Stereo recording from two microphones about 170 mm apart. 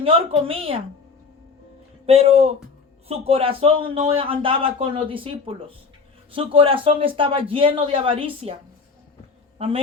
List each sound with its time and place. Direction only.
0.0 s a man's voice: 35° right (ahead or behind)
2.0 s a man's voice: 35° right (ahead or behind)
9.6 s a man's voice: 35° right (ahead or behind)